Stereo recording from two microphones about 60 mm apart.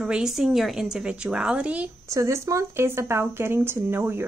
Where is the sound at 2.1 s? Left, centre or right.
Right.